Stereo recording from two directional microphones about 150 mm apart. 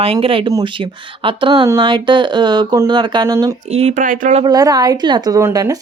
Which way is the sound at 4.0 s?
60° right (ahead or behind).